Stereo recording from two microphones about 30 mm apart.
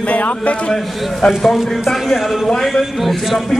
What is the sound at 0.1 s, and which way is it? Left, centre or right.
Speech, left.